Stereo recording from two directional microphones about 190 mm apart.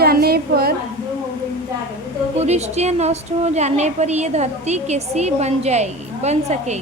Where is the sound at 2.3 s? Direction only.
35° right (ahead or behind).